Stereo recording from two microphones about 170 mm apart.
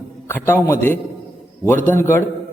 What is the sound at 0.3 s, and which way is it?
A man's voice, 15° left (ahead or behind).